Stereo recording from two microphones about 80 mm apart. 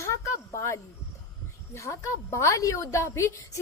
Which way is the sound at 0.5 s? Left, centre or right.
Left.